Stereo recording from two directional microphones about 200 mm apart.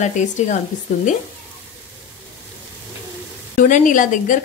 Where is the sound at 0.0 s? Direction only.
35° left (ahead or behind).